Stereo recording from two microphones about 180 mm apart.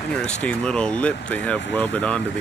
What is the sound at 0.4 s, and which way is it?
Speech, 5° left (ahead or behind).